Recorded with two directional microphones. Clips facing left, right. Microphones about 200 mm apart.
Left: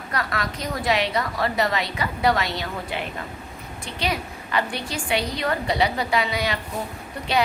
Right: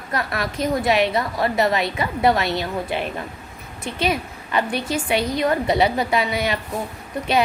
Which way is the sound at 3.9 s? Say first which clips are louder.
Right 4 dB; 20° right (ahead or behind).